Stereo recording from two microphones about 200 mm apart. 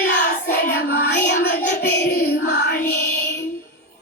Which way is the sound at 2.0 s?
55° left (ahead or behind).